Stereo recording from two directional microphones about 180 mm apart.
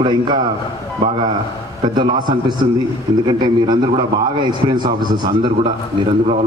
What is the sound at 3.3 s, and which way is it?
Speech, 25° right (ahead or behind).